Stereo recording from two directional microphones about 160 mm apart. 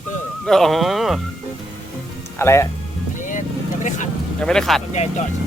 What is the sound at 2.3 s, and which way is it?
Speech, 15° left (ahead or behind).